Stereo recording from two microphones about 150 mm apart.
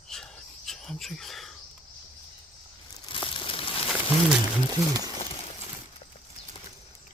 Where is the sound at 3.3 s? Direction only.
35° left (ahead or behind).